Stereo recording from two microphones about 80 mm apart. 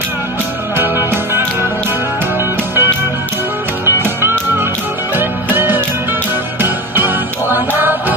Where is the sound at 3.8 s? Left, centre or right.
Right.